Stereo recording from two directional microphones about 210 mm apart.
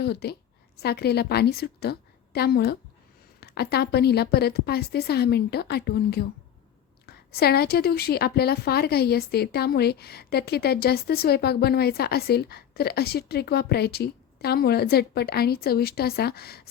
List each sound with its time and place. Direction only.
0.0 s a woman's voice: 50° left (ahead or behind)